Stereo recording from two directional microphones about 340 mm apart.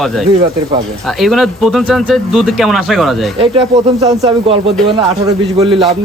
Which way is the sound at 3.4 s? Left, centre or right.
Centre.